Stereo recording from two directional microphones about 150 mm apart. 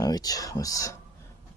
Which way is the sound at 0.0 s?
25° left (ahead or behind).